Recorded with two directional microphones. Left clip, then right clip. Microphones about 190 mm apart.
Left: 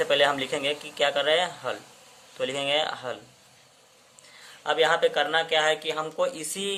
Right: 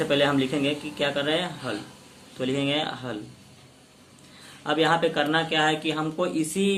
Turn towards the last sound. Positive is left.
turn(degrees=35)  # may be behind; listen again after turning